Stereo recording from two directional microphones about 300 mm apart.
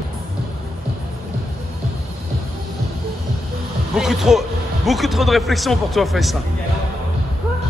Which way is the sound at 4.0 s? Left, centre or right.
Centre.